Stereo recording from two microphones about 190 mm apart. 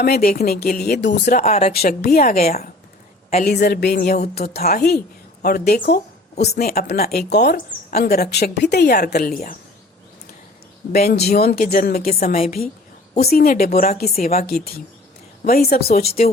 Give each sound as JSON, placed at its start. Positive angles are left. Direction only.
{"t": 0.0, "sound": "speech", "side_deg": 55}
{"t": 1.3, "sound": "speech", "side_deg": 40}
{"t": 1.7, "sound": "speech", "side_deg": 55}
{"t": 10.9, "sound": "speech", "side_deg": 55}